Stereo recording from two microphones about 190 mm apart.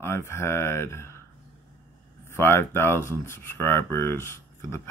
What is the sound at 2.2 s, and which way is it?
Speech, 15° left (ahead or behind).